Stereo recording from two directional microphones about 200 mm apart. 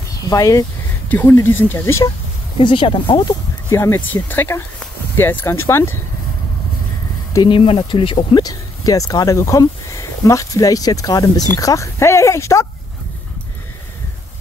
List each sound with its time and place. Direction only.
0.2 s speech: 15° left (ahead or behind)
2.6 s speech: 25° left (ahead or behind)
3.7 s speech: 15° left (ahead or behind)
7.3 s speech: 25° left (ahead or behind)